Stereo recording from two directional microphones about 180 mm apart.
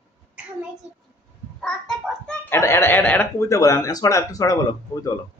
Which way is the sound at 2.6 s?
15° left (ahead or behind).